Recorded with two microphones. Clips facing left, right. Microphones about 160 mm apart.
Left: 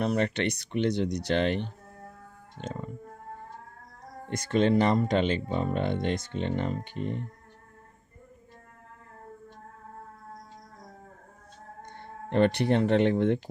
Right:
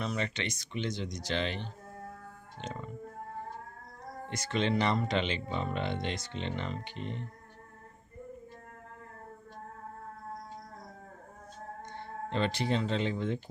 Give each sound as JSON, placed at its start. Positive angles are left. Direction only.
{"t": 0.0, "sound": "speech", "side_deg": 60}
{"t": 4.3, "sound": "speech", "side_deg": 50}
{"t": 11.9, "sound": "speech", "side_deg": 55}